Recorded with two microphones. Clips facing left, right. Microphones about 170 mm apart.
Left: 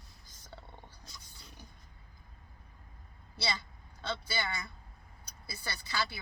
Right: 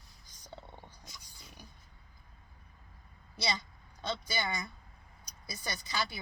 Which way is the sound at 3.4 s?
15° right (ahead or behind).